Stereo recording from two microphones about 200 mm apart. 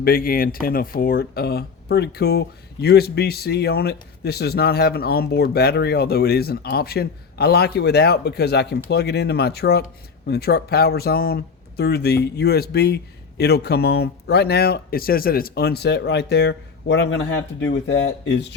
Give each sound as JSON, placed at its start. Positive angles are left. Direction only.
{"t": 0.0, "sound": "speech", "side_deg": 45}